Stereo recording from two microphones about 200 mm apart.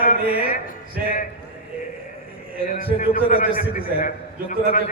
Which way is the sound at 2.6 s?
45° left (ahead or behind).